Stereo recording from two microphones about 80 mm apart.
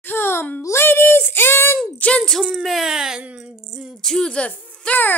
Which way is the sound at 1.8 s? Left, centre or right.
Centre.